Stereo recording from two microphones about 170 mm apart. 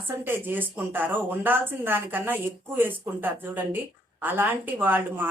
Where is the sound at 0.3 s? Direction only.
10° right (ahead or behind).